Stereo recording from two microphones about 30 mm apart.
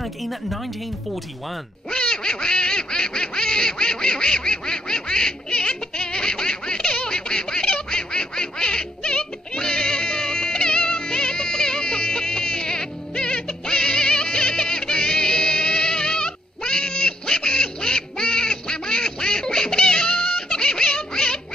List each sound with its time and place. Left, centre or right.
0.0 s speech: centre
1.9 s quack: left